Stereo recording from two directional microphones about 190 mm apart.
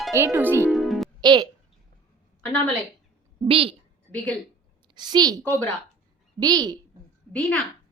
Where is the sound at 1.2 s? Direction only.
25° right (ahead or behind).